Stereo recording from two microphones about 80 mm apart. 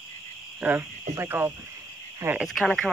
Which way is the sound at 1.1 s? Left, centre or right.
Right.